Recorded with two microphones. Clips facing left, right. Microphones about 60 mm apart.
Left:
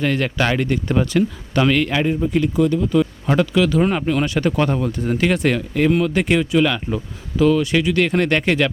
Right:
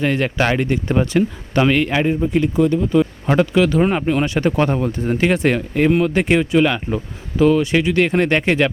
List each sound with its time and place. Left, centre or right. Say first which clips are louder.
0.0 s speech: right 1 dB; right